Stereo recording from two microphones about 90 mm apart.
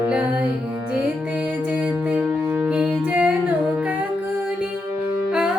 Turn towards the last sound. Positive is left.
turn(degrees=-10)  # may be behind; listen again after turning